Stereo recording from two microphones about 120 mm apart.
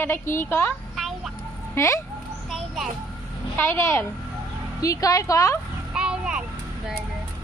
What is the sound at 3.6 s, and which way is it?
Speech, 20° left (ahead or behind).